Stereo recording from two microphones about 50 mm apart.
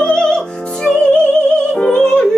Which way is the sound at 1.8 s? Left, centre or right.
Centre.